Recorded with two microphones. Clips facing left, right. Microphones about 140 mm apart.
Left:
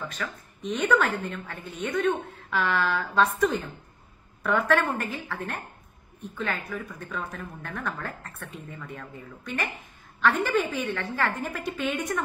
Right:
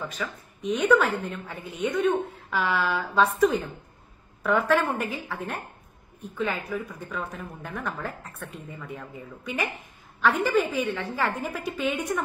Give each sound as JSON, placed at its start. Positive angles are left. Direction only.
{"t": 0.1, "sound": "a woman's voice", "side_deg": -5}